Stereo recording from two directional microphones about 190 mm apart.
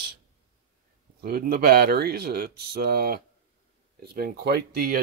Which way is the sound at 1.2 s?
55° right (ahead or behind).